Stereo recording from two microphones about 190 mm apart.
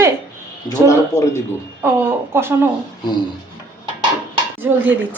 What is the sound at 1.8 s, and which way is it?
Speech, 15° right (ahead or behind).